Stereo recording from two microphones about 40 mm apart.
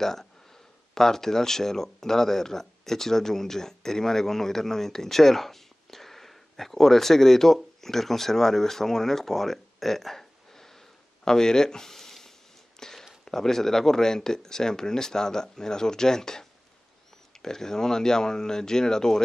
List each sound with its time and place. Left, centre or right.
0.0 s speech: centre
12.7 s a sound: centre
13.2 s speech: centre